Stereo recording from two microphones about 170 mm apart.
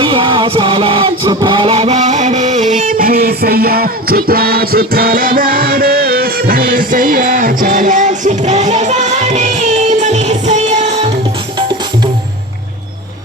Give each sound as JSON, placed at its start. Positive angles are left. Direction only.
{"t": 0.0, "sound": "music", "side_deg": -30}